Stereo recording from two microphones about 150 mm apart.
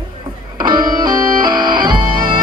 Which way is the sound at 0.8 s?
30° right (ahead or behind).